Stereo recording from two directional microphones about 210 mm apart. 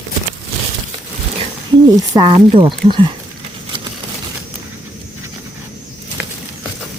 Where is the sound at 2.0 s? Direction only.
20° right (ahead or behind).